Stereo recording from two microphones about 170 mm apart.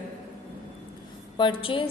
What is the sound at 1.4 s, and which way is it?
Speech, 30° left (ahead or behind).